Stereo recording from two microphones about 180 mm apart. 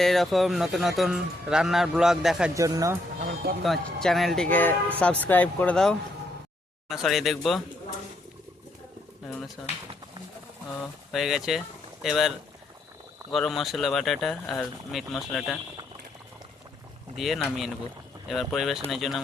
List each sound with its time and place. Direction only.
0.0 s a man's voice: centre (ahead or behind)
2.6 s speech: 20° right (ahead or behind)
3.6 s a man's voice: centre (ahead or behind)
9.6 s a man's voice: 5° left (ahead or behind)
10.8 s a man's voice: centre (ahead or behind)
13.3 s a man's voice: centre (ahead or behind)
17.2 s a man's voice: centre (ahead or behind)